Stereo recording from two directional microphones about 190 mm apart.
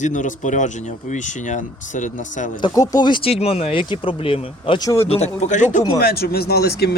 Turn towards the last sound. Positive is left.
turn(degrees=60)  # may be behind; listen again after turning